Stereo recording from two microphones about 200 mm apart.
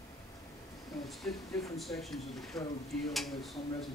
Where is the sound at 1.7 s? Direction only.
Centre (ahead or behind).